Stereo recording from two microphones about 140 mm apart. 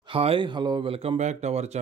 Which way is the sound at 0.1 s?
40° right (ahead or behind).